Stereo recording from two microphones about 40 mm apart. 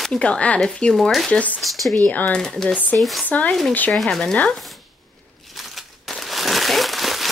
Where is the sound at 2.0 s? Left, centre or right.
Left.